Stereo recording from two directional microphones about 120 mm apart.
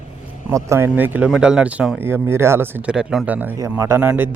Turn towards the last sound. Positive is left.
turn(degrees=-15)  # may be behind; listen again after turning